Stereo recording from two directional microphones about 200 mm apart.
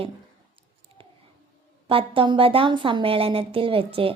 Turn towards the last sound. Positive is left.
turn(degrees=-25)  # may be behind; listen again after turning